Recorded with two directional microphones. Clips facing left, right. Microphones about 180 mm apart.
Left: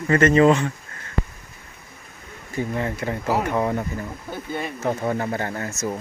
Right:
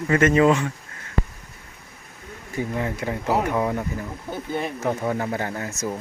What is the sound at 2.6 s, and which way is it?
Speech, 10° right (ahead or behind).